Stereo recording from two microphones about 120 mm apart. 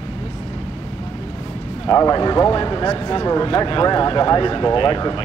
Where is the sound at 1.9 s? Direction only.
30° left (ahead or behind).